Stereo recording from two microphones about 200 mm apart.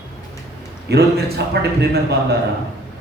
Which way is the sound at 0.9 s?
55° right (ahead or behind).